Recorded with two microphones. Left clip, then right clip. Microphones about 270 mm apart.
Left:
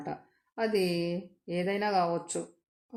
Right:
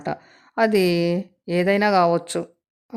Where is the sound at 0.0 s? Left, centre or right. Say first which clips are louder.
Right 10 dB; right.